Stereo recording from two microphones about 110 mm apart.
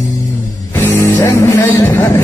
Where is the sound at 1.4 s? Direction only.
20° left (ahead or behind).